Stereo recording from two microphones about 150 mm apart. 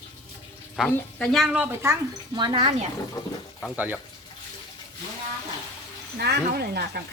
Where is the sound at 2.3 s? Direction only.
30° right (ahead or behind).